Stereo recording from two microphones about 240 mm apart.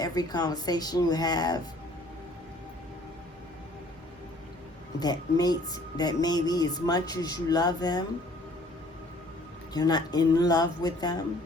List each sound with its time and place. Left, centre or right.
0.0 s speech: centre
4.9 s speech: centre
9.7 s speech: centre